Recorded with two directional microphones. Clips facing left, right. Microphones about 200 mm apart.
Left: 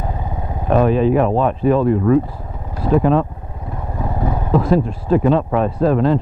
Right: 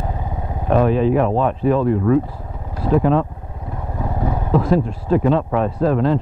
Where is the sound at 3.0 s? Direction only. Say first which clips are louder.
Left 1 dB; 20° left (ahead or behind).